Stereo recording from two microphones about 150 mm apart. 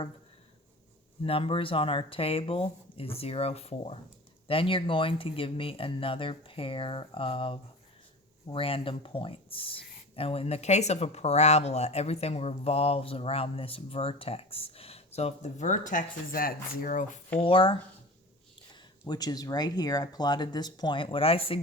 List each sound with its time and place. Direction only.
1.2 s speech: 35° left (ahead or behind); by 17.3 s 60° left (ahead or behind)
17.4 s speech: 35° left (ahead or behind)
19.0 s speech: 25° left (ahead or behind)